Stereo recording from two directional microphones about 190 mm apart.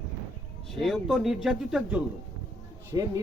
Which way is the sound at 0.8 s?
Centre (ahead or behind).